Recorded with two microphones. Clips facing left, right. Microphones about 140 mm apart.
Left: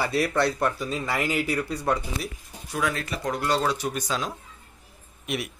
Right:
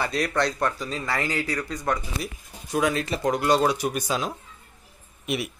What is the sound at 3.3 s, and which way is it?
Speech, 15° right (ahead or behind).